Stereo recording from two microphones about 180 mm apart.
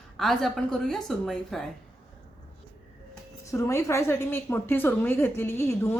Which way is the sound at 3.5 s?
15° left (ahead or behind).